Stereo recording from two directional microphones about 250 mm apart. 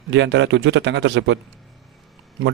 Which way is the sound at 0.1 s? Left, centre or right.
Right.